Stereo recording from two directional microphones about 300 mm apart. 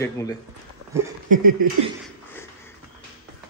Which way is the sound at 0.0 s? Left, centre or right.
Centre.